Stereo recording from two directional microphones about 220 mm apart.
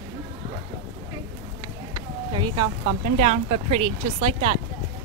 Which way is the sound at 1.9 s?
20° right (ahead or behind).